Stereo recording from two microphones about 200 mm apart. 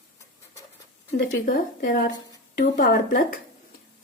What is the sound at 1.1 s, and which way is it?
A woman's voice, 45° left (ahead or behind).